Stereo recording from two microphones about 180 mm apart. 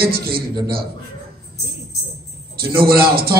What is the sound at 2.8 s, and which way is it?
Speech, 60° right (ahead or behind).